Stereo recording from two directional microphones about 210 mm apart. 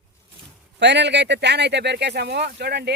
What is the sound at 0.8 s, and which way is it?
Speech, 55° right (ahead or behind).